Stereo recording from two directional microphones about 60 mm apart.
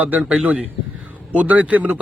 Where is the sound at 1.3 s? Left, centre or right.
Right.